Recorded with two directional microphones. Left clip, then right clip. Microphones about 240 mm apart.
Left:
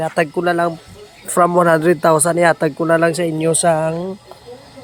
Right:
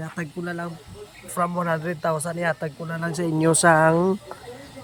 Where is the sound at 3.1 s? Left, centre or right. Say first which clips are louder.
Left 4 dB; centre.